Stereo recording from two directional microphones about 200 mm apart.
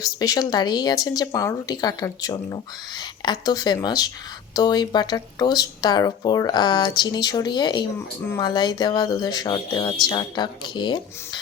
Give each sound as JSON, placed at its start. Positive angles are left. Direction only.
{"t": 0.0, "sound": "speech", "side_deg": 20}